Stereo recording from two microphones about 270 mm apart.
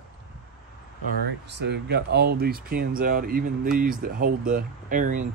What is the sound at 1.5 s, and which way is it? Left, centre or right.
Speech, right.